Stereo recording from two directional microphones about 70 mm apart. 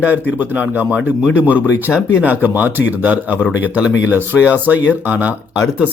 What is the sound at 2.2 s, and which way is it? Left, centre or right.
Speech, right.